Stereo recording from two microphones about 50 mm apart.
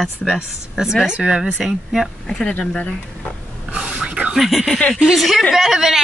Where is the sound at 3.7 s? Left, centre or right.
Centre.